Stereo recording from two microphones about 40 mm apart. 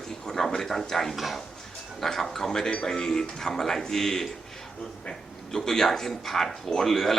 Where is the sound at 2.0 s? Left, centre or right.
Centre.